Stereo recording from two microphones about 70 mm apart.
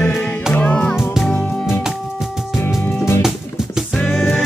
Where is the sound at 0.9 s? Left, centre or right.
Centre.